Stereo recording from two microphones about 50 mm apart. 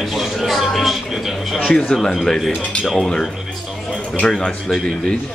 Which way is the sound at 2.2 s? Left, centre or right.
Centre.